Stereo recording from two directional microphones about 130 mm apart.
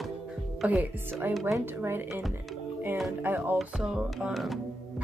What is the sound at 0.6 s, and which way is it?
Speech, 15° right (ahead or behind).